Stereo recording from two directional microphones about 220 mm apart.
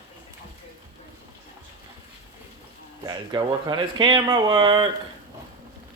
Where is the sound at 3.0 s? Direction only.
20° right (ahead or behind).